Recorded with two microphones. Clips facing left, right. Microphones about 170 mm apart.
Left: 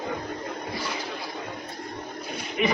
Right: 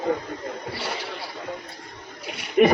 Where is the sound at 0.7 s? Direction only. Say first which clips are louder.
Even; 70° right (ahead or behind).